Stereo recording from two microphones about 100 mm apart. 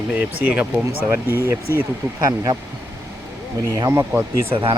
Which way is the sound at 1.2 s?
30° left (ahead or behind).